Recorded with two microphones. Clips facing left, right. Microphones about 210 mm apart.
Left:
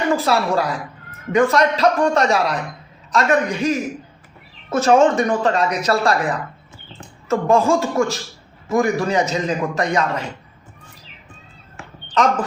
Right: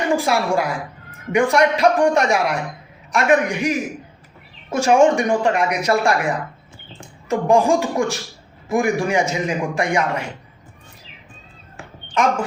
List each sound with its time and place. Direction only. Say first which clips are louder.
0.1 s speech: even; 15° right (ahead or behind)